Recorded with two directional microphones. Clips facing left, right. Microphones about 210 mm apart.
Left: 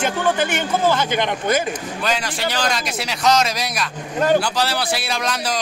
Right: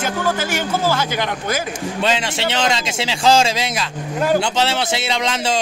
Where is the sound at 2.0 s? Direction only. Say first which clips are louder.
Right 5 dB; 25° right (ahead or behind).